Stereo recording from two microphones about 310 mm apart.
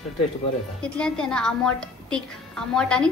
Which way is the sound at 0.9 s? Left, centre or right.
Centre.